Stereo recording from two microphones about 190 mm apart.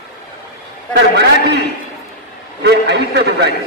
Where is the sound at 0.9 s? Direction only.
60° right (ahead or behind).